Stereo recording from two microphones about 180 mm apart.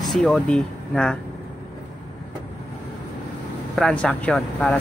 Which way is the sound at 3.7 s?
5° left (ahead or behind).